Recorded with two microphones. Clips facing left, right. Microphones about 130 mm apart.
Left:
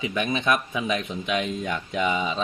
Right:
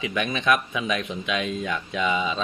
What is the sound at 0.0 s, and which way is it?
Speech, 25° left (ahead or behind).